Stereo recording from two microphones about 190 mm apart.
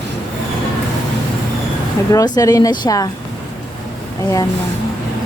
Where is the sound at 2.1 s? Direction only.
20° left (ahead or behind).